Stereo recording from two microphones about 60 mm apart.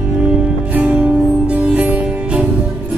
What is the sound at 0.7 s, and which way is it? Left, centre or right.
Music, right.